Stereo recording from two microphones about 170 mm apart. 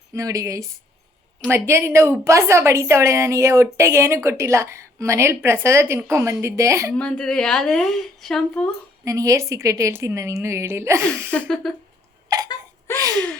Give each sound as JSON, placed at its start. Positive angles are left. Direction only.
{"t": 0.1, "sound": "a woman's voice", "side_deg": -20}
{"t": 6.9, "sound": "a woman's voice", "side_deg": 5}
{"t": 9.0, "sound": "a woman's voice", "side_deg": -20}
{"t": 11.3, "sound": "a woman's voice", "side_deg": 5}
{"t": 12.9, "sound": "gasp", "side_deg": 15}